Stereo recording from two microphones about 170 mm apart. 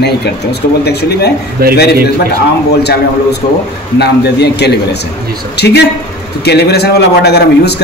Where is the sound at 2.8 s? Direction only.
75° left (ahead or behind).